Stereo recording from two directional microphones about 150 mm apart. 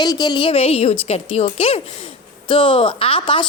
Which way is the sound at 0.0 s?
25° left (ahead or behind).